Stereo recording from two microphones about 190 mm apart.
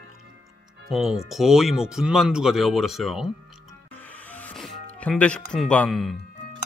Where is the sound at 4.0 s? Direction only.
10° left (ahead or behind).